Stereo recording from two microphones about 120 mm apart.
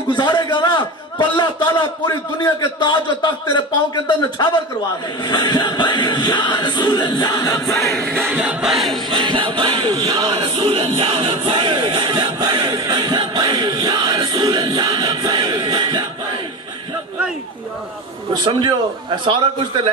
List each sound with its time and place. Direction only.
0.2 s a man's voice: 35° left (ahead or behind)
7.3 s choir: 25° left (ahead or behind)
8.3 s music: 10° right (ahead or behind)
9.1 s a sound: 45° right (ahead or behind)
18.4 s a man's voice: 45° right (ahead or behind)